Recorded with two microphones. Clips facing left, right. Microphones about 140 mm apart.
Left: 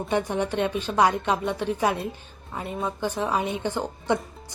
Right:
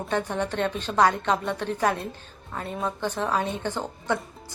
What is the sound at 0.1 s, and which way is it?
Speech, 10° left (ahead or behind).